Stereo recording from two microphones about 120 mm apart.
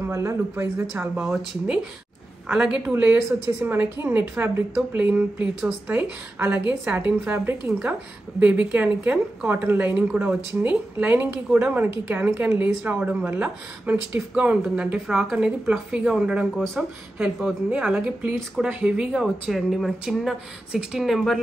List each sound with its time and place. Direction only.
0.1 s speech: 25° right (ahead or behind)
1.1 s speech: 5° right (ahead or behind)